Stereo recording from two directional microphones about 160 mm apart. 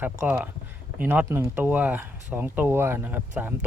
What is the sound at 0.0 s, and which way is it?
Speech, 10° right (ahead or behind).